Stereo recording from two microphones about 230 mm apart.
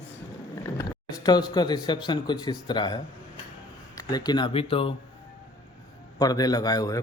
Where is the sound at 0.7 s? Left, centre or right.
Centre.